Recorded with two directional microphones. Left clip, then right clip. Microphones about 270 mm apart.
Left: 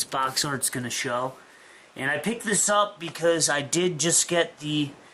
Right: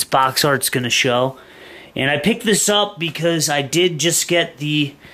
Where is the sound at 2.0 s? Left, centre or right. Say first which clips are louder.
Right 9 dB; right.